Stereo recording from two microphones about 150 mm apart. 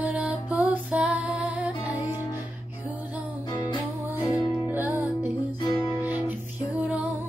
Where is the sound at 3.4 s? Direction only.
30° left (ahead or behind).